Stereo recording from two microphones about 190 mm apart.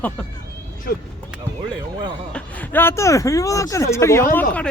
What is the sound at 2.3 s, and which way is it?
Speech, 5° left (ahead or behind).